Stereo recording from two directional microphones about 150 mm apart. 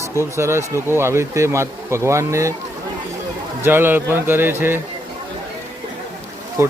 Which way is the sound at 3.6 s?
15° right (ahead or behind).